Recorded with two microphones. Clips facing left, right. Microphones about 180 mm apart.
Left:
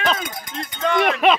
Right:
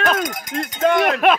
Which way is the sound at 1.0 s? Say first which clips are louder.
Left 3 dB; 5° right (ahead or behind).